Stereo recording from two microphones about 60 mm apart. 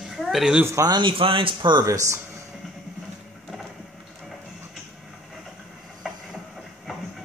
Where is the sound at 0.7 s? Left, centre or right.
Right.